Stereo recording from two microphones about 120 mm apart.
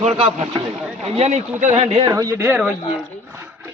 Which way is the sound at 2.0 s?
30° right (ahead or behind).